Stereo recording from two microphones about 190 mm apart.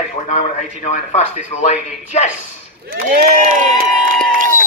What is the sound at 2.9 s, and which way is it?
Speech, 50° right (ahead or behind).